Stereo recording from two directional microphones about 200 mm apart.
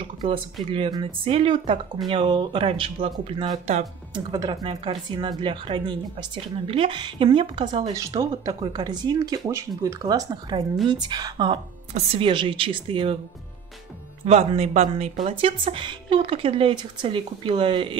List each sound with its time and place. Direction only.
0.2 s a woman's voice: 25° right (ahead or behind)
14.2 s speech: 30° right (ahead or behind)
15.6 s a woman's voice: 25° right (ahead or behind)